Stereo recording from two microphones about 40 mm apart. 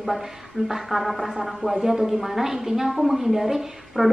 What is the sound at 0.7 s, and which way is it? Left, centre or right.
A man's voice, centre.